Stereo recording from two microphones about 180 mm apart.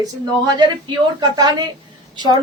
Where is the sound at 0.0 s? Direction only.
20° right (ahead or behind).